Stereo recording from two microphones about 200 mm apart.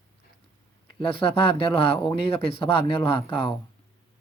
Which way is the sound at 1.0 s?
25° left (ahead or behind).